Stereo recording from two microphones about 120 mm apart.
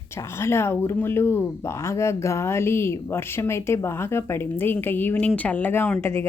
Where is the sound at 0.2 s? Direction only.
20° left (ahead or behind).